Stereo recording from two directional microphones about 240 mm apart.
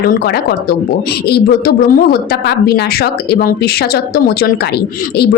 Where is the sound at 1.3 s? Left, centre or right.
Left.